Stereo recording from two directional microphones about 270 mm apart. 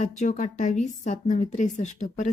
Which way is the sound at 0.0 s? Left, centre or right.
Left.